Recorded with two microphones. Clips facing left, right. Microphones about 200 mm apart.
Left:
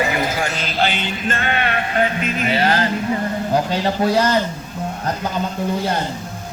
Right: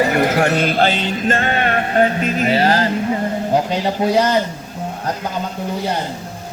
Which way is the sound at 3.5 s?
20° right (ahead or behind).